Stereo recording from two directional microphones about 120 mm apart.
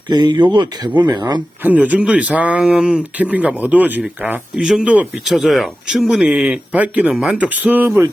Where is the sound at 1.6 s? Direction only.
15° right (ahead or behind).